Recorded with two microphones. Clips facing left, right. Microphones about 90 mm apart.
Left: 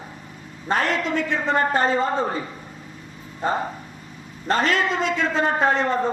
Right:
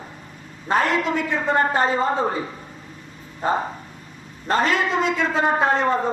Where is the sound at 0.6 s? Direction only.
15° right (ahead or behind).